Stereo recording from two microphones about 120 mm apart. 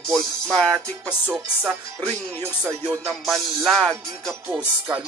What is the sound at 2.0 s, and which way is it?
Music, 20° right (ahead or behind).